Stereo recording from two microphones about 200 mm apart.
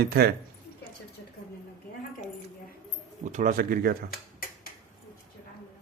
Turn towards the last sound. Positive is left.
turn(degrees=-45)  # may be behind; listen again after turning